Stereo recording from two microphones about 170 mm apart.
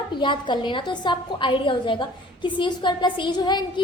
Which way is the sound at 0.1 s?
25° left (ahead or behind).